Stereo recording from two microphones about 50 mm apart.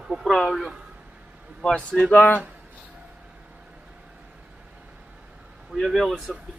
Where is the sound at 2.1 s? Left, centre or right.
Left.